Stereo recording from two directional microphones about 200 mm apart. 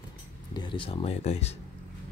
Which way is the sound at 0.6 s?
25° left (ahead or behind).